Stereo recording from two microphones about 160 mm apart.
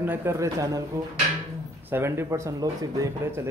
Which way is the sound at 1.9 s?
15° right (ahead or behind).